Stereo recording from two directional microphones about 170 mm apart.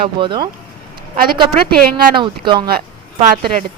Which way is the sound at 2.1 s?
30° right (ahead or behind).